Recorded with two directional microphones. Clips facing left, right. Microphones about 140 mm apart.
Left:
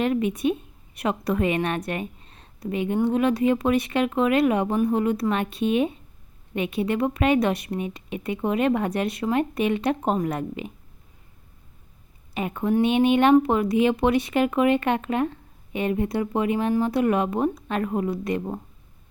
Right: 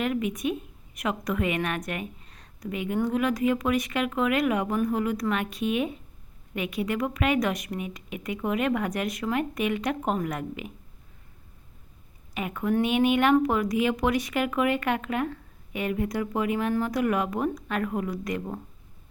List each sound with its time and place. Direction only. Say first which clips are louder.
0.0 s speech: left 5 dB; 30° left (ahead or behind)
12.3 s a woman's voice: left 3 dB; 30° left (ahead or behind)